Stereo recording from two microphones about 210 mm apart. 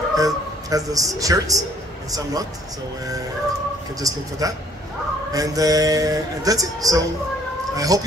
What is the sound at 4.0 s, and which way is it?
A man's voice, 15° right (ahead or behind).